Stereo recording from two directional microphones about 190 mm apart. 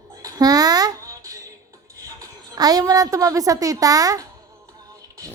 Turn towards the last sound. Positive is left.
turn(degrees=-20)  # may be behind; listen again after turning